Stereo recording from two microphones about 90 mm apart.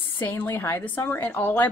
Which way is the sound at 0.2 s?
20° left (ahead or behind).